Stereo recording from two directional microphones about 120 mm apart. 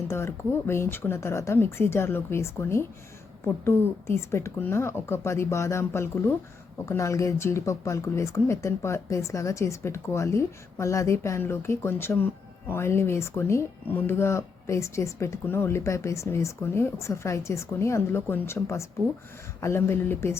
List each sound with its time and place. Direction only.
0.1 s speech: 20° left (ahead or behind)